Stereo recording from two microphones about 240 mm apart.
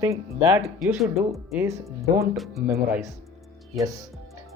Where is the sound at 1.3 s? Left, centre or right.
Centre.